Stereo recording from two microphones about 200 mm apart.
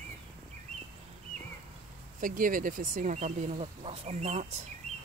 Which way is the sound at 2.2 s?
45° right (ahead or behind).